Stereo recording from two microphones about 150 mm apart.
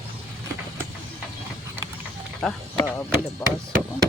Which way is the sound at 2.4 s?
Centre (ahead or behind).